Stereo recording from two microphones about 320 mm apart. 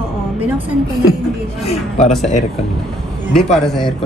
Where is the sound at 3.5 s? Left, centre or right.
Centre.